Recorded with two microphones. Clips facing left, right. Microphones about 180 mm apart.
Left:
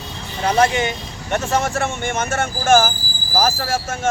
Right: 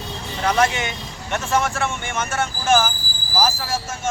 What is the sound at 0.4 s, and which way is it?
Speech, 30° left (ahead or behind).